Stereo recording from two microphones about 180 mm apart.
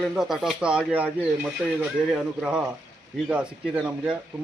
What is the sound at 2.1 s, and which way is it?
Speech, 5° right (ahead or behind).